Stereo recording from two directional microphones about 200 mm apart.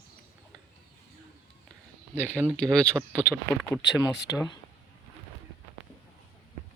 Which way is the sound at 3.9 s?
60° left (ahead or behind).